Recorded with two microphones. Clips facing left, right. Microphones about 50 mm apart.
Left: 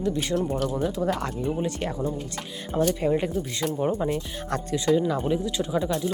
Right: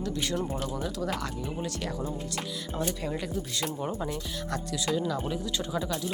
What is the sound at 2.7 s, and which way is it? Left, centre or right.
Speech, left.